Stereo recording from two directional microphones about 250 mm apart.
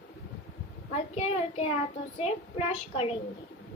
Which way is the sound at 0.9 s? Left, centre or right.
Left.